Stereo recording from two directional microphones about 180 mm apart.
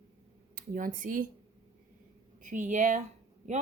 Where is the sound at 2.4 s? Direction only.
45° right (ahead or behind).